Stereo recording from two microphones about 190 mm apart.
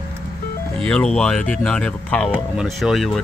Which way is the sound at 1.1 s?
5° left (ahead or behind).